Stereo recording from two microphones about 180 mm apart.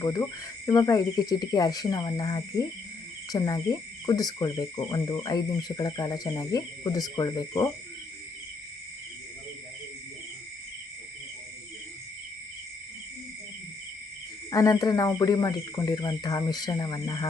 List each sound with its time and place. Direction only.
0.0 s speech: 20° left (ahead or behind)
14.5 s speech: 20° left (ahead or behind)